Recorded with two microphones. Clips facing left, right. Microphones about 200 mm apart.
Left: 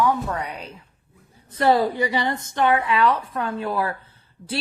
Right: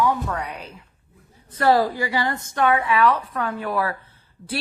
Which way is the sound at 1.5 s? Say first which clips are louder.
Even; 25° left (ahead or behind).